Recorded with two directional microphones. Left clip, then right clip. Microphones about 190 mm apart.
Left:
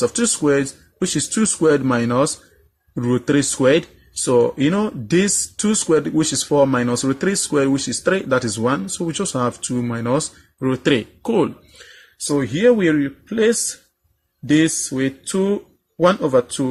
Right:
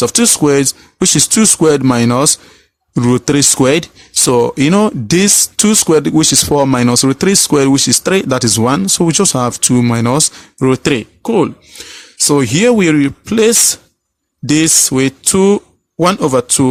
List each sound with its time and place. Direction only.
0.0 s speech: 40° right (ahead or behind); by 11.5 s 25° right (ahead or behind)
12.3 s speech: 55° right (ahead or behind)